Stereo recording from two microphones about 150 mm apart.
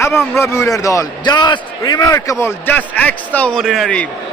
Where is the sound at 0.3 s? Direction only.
20° left (ahead or behind).